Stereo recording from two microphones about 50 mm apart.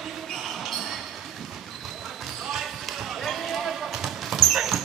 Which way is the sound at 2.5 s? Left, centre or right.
Centre.